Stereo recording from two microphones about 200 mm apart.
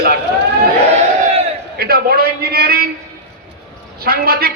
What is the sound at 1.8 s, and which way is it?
A man's voice, 50° right (ahead or behind).